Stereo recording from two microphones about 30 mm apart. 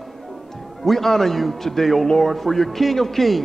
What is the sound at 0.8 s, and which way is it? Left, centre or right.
A man's voice, centre.